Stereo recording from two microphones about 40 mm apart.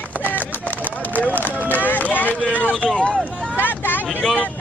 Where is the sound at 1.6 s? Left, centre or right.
Left.